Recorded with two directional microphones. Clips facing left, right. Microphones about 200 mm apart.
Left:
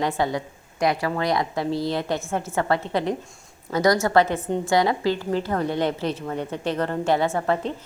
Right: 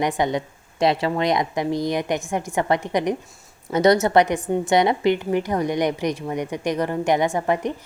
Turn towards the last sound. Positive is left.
turn(degrees=-15)  # may be behind; listen again after turning